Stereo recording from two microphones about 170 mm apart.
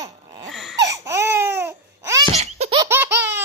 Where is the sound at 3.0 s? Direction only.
90° right.